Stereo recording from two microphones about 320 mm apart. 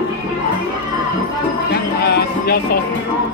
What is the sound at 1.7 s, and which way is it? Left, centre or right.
Music, left.